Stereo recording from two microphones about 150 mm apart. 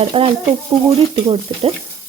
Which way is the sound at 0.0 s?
40° right (ahead or behind).